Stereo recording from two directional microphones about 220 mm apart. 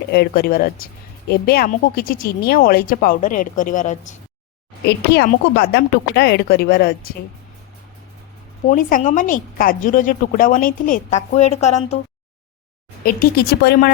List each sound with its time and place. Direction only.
0.1 s speech: 45° left (ahead or behind)
4.9 s speech: 50° left (ahead or behind)
8.6 s speech: 40° left (ahead or behind)
13.0 s speech: 40° left (ahead or behind)